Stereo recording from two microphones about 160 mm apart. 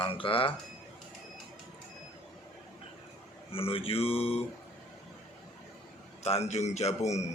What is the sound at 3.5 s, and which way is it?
Speech, 35° left (ahead or behind).